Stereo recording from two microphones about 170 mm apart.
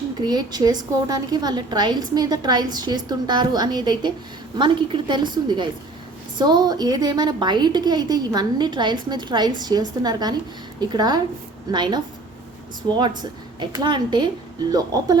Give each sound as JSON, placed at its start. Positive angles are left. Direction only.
{"t": 0.3, "sound": "a woman's voice", "side_deg": -25}
{"t": 13.6, "sound": "a woman's voice", "side_deg": -25}